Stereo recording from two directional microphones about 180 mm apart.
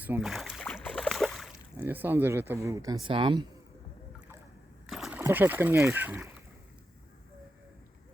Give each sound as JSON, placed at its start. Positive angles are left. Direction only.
{"t": 0.2, "sound": "boat", "side_deg": 0}
{"t": 1.7, "sound": "speech", "side_deg": -10}
{"t": 4.9, "sound": "splash", "side_deg": 0}
{"t": 5.2, "sound": "speech", "side_deg": -10}